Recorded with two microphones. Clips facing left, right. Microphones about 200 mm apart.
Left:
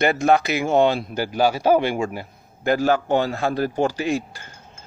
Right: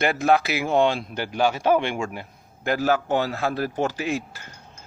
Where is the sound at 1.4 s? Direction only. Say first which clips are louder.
Left 3 dB; 40° left (ahead or behind).